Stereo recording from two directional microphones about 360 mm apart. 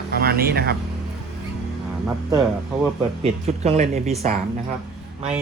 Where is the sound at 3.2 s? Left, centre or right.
Centre.